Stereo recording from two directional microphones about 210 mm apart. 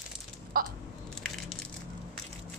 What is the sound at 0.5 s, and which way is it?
Speech, 45° right (ahead or behind).